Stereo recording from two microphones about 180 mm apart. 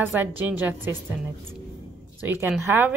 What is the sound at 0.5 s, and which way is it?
Speech, 10° right (ahead or behind).